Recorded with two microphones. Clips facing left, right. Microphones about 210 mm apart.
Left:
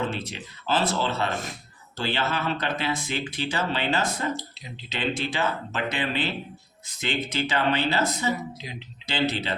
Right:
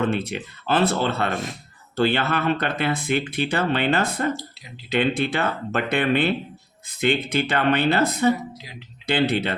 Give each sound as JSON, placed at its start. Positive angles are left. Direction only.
{"t": 0.0, "sound": "speech", "side_deg": -60}